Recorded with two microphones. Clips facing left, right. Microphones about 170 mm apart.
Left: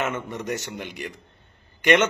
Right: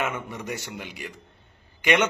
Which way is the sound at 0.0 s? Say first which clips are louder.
Left 2 dB; 10° right (ahead or behind).